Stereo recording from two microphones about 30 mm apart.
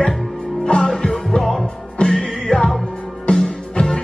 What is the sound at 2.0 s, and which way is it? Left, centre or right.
Music, left.